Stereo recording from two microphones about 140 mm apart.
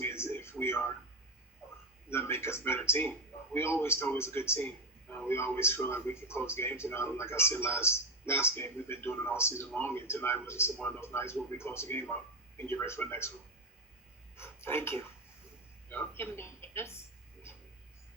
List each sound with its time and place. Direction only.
0.0 s television: 15° left (ahead or behind)
0.6 s a sound: 15° left (ahead or behind)
2.0 s a man's voice: 15° left (ahead or behind)
14.3 s speech: 15° left (ahead or behind)